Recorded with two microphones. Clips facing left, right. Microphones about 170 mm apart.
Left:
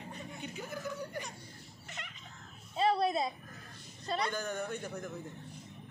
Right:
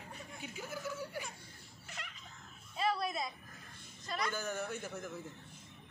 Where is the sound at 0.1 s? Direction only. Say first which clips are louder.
Left 3 dB; centre (ahead or behind).